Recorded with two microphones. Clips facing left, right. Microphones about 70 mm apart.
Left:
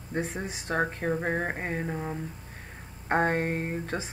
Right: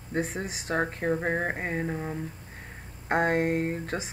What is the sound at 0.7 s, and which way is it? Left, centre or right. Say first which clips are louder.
Speech: right 1 dB; centre.